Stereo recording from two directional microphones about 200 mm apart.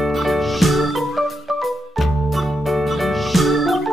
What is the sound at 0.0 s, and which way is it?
Music, centre (ahead or behind).